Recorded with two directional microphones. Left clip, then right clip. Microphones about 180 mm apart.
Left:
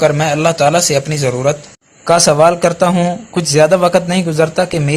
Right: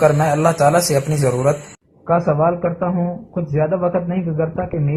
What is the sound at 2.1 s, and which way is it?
Speech, 55° left (ahead or behind).